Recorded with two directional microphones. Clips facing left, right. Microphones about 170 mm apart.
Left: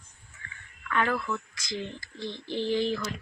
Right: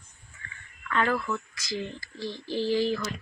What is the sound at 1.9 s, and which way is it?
Speech, 20° left (ahead or behind).